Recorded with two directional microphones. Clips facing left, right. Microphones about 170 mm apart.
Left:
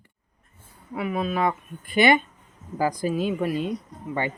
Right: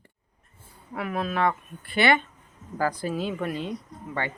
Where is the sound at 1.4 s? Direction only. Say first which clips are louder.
Even; 15° left (ahead or behind).